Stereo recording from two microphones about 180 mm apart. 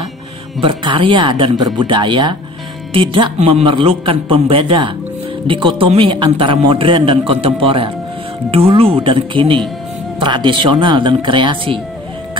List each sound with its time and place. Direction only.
0.6 s a man's voice: 30° right (ahead or behind)